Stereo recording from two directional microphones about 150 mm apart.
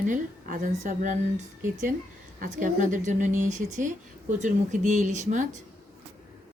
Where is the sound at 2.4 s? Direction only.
60° right (ahead or behind).